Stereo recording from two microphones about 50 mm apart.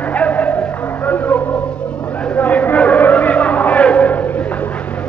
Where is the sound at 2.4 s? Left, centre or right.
Left.